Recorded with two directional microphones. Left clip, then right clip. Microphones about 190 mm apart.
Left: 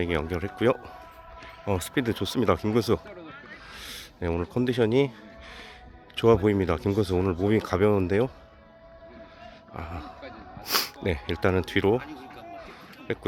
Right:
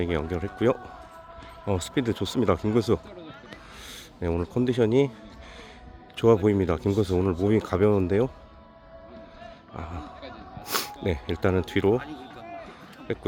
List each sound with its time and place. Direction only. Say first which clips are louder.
0.0 s speech: even; 5° right (ahead or behind)
3.8 s rub: left 1 dB; 5° right (ahead or behind)
6.1 s speech: even; 5° right (ahead or behind)
9.7 s speech: left 1 dB; 5° right (ahead or behind)
11.9 s a sound: right 1 dB; 30° right (ahead or behind)
13.1 s speech: even; 5° right (ahead or behind)